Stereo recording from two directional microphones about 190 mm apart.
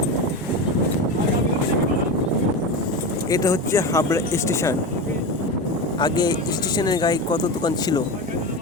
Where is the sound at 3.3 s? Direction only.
15° left (ahead or behind).